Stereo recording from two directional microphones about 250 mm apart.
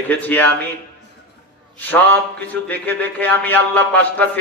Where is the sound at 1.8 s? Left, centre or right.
Centre.